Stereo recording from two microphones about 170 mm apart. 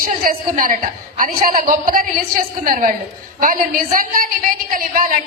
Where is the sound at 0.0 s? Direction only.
55° right (ahead or behind).